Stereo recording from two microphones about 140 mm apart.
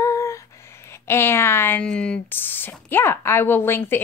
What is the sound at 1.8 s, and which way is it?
A woman's voice, 5° left (ahead or behind).